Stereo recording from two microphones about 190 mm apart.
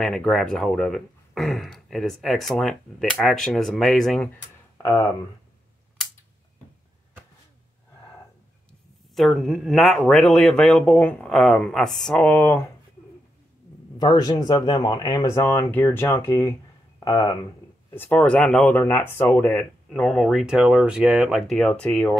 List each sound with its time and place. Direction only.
0.0 s speech: centre (ahead or behind)
9.1 s speech: centre (ahead or behind)
13.9 s speech: 20° left (ahead or behind)
17.9 s speech: 10° left (ahead or behind)